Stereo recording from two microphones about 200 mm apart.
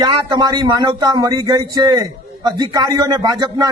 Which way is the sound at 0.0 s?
20° right (ahead or behind).